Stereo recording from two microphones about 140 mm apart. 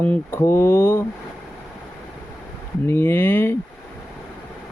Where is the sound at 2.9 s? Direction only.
15° left (ahead or behind).